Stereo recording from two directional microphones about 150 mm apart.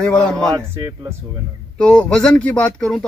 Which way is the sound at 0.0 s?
5° left (ahead or behind).